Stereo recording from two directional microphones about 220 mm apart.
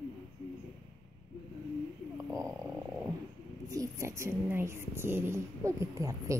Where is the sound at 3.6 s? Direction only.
15° right (ahead or behind).